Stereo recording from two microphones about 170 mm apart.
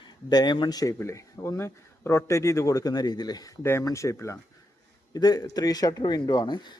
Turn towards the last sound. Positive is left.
turn(degrees=25)  # may be behind; listen again after turning